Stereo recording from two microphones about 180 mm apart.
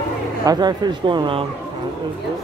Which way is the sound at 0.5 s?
25° right (ahead or behind).